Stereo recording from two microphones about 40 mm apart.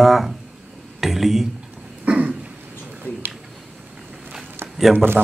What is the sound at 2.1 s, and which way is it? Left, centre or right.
Throat clearing, right.